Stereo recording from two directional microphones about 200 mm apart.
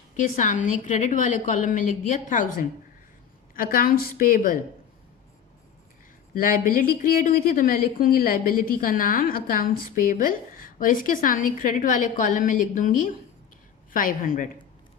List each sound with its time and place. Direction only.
0.2 s a woman's voice: 40° left (ahead or behind)
6.3 s a woman's voice: 45° left (ahead or behind)